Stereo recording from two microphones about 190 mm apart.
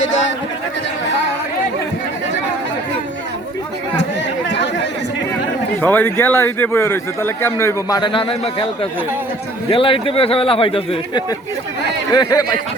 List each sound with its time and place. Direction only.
4.4 s chatter: 70° left (ahead or behind)
5.8 s a man's voice: 10° left (ahead or behind)